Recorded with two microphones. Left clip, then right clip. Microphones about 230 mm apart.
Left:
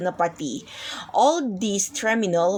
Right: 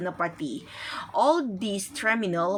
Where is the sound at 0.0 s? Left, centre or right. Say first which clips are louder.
Left 6 dB; centre.